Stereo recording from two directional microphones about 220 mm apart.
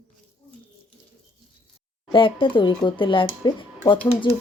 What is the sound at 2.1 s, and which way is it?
Speech, 25° left (ahead or behind).